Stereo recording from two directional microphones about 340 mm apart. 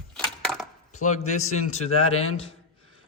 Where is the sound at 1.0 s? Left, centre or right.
Left.